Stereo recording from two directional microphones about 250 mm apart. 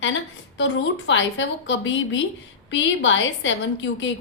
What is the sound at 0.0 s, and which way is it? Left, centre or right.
A woman's voice, left.